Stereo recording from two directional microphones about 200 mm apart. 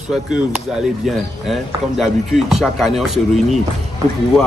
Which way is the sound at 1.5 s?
Centre (ahead or behind).